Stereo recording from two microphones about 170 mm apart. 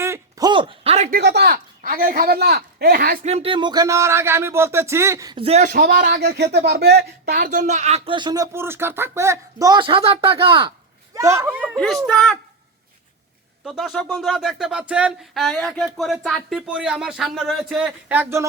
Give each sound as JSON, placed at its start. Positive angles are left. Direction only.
{"t": 0.0, "sound": "a sound", "side_deg": -20}
{"t": 1.1, "sound": "speech", "side_deg": -80}
{"t": 3.2, "sound": "speech", "side_deg": -35}
{"t": 5.4, "sound": "speech", "side_deg": -40}
{"t": 5.7, "sound": "speech", "side_deg": -60}
{"t": 11.1, "sound": "speech", "side_deg": -15}
{"t": 11.8, "sound": "speech", "side_deg": 5}
{"t": 13.7, "sound": "speech", "side_deg": 0}